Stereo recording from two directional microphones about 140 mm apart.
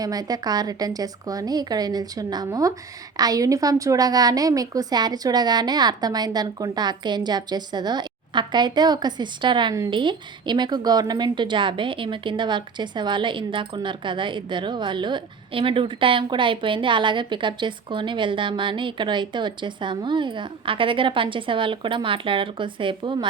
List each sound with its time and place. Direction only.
0.0 s a woman's voice: 25° right (ahead or behind)